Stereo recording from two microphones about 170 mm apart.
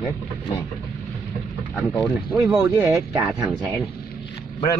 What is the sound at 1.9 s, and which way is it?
Speech, 10° right (ahead or behind).